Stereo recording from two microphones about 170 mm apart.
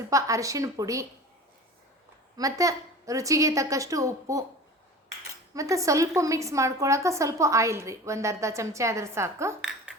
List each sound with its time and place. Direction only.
0.1 s a woman's voice: 20° right (ahead or behind)
2.3 s a woman's voice: 20° right (ahead or behind)
5.5 s a woman's voice: 20° right (ahead or behind)
9.6 s speech: 5° right (ahead or behind)